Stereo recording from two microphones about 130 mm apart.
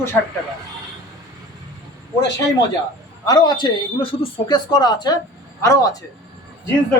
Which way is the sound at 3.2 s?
30° left (ahead or behind).